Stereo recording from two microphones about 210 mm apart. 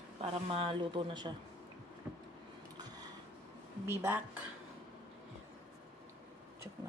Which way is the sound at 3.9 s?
10° right (ahead or behind).